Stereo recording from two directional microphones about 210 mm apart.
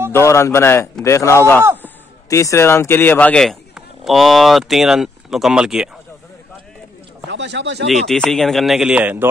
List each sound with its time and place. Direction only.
0.1 s a man's voice: 15° left (ahead or behind); by 5.9 s 5° right (ahead or behind)
7.2 s speech: 55° right (ahead or behind)
7.8 s speech: centre (ahead or behind)